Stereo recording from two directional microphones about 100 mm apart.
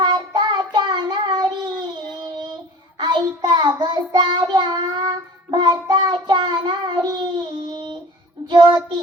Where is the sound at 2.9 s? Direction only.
50° right (ahead or behind).